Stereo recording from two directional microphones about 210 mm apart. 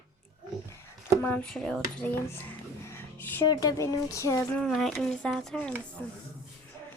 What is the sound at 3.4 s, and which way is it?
Speech, 20° left (ahead or behind).